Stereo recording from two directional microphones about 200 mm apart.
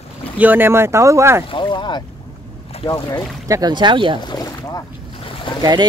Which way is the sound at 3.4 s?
20° right (ahead or behind).